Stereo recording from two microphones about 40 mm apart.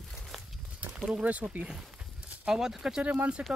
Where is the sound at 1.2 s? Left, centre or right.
Right.